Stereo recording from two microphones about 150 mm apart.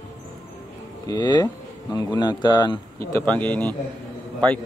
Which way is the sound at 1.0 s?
30° left (ahead or behind).